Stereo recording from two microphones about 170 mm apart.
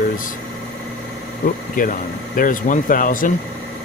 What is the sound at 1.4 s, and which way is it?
Speech, 55° left (ahead or behind).